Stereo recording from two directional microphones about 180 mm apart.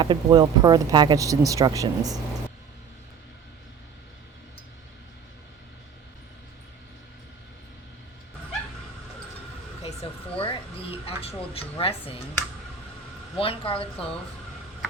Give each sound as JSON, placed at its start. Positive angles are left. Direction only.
{"t": 0.0, "sound": "speech", "side_deg": -25}
{"t": 9.8, "sound": "a sound", "side_deg": 35}
{"t": 13.3, "sound": "a woman's voice", "side_deg": 30}